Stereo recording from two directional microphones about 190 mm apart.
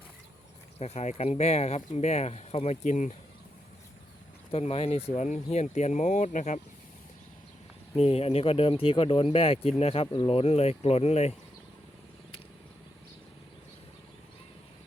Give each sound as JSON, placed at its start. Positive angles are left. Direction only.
{"t": 0.8, "sound": "speech", "side_deg": 35}
{"t": 4.5, "sound": "speech", "side_deg": 30}
{"t": 7.9, "sound": "speech", "side_deg": 30}